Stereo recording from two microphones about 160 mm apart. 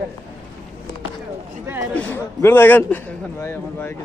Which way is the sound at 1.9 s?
10° left (ahead or behind).